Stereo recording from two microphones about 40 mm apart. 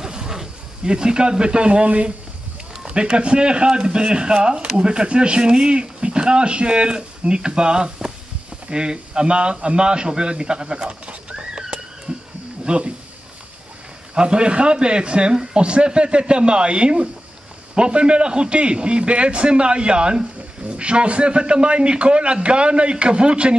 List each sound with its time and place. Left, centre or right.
0.0 s snake: centre
2.8 s a man's voice: right
12.1 s roaring cats: right
12.6 s speech: right
14.1 s speech: right